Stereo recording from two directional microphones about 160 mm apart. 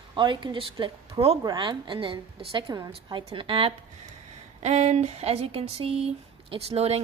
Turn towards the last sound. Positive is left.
turn(degrees=-40)  # may be behind; listen again after turning